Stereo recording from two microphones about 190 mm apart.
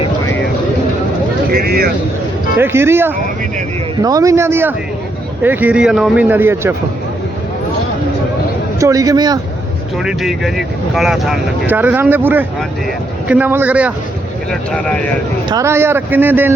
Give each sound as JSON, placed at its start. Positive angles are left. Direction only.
{"t": 1.5, "sound": "speech", "side_deg": -50}
{"t": 2.6, "sound": "a man's voice", "side_deg": -10}
{"t": 8.8, "sound": "a man's voice", "side_deg": -15}
{"t": 10.0, "sound": "a man's voice", "side_deg": 0}
{"t": 14.5, "sound": "speech", "side_deg": 5}
{"t": 15.4, "sound": "a man's voice", "side_deg": -15}